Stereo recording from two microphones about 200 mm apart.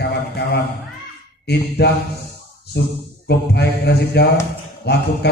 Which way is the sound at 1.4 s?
55° left (ahead or behind).